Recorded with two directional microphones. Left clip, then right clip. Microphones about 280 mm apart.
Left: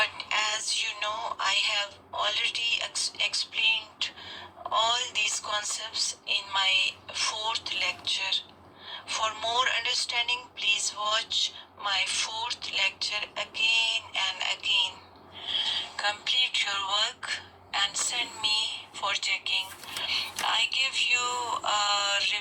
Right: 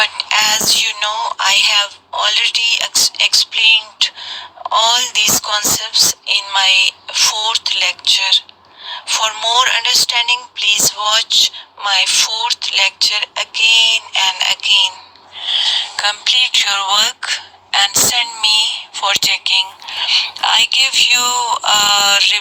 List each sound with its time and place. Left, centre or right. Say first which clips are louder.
0.0 s music: right 13 dB; right
4.7 s a woman's voice: right 13 dB; right